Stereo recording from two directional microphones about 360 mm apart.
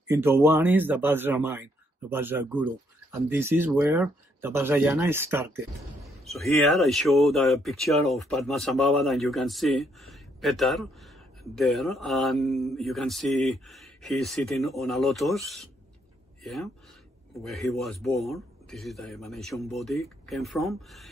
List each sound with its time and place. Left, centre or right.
0.1 s speech: centre
17.4 s speech: centre